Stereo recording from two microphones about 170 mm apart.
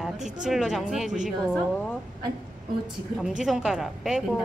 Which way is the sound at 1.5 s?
10° left (ahead or behind).